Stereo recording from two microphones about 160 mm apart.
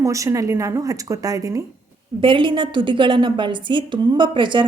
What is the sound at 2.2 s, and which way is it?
A woman's voice, 30° right (ahead or behind).